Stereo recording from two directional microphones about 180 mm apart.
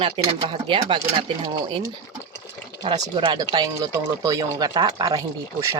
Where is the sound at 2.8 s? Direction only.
25° right (ahead or behind).